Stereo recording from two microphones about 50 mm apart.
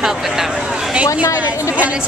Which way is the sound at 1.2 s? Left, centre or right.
Left.